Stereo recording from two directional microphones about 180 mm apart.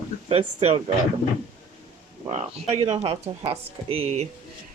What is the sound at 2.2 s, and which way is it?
Speech, 35° right (ahead or behind).